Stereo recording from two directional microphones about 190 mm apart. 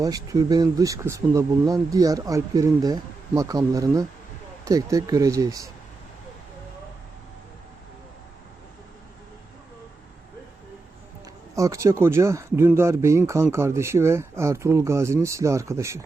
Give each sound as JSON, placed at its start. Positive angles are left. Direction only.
{"t": 0.0, "sound": "speech", "side_deg": -20}
{"t": 11.5, "sound": "speech", "side_deg": -15}